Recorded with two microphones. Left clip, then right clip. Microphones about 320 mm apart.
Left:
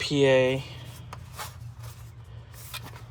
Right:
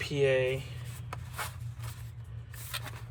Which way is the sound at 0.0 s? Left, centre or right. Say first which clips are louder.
Left 6 dB; centre.